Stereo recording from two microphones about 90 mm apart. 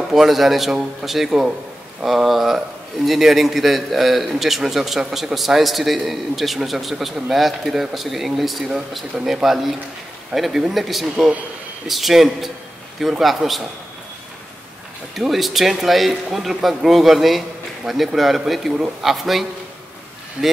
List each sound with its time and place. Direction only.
0.1 s a man's voice: centre (ahead or behind)
15.1 s a man's voice: centre (ahead or behind)